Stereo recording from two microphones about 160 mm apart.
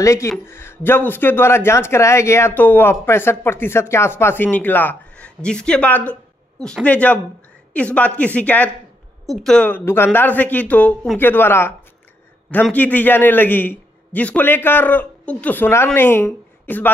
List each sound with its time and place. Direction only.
0.0 s speech: 20° left (ahead or behind)
12.7 s speech: 10° left (ahead or behind)